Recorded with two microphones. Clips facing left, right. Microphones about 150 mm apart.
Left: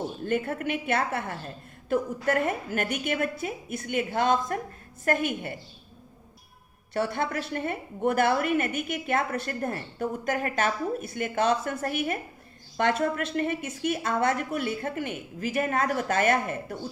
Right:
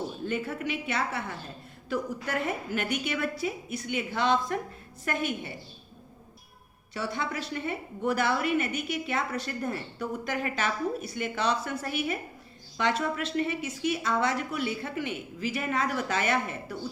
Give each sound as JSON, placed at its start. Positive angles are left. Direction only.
{"t": 0.3, "sound": "a woman's voice", "side_deg": 55}
{"t": 6.9, "sound": "a woman's voice", "side_deg": 55}